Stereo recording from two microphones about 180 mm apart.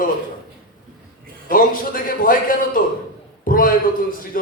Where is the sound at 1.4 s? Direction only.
50° left (ahead or behind).